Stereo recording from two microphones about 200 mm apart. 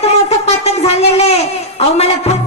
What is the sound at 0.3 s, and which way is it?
Shofar, 30° left (ahead or behind).